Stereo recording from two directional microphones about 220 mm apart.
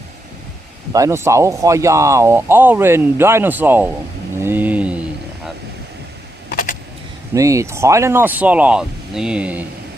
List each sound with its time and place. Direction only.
0.9 s speech: 15° right (ahead or behind)
4.4 s a sound: 10° right (ahead or behind)
6.5 s vehicle: 35° left (ahead or behind)
7.3 s speech: 15° right (ahead or behind)